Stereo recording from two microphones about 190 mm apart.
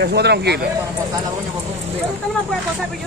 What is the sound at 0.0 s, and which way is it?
Speech, 60° right (ahead or behind).